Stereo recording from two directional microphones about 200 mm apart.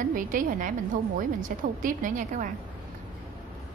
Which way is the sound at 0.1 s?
45° right (ahead or behind).